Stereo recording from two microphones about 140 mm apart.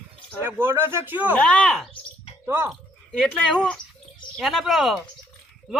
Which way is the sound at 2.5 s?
20° right (ahead or behind).